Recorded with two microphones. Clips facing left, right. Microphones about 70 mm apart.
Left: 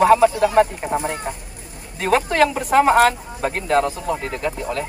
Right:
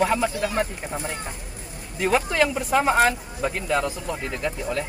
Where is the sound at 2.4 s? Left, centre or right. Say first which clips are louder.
Left 5 dB; left.